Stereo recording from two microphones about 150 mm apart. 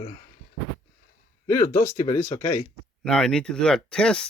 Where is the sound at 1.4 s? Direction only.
20° left (ahead or behind).